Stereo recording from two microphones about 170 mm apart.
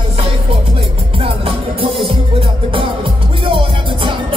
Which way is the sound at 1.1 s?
35° right (ahead or behind).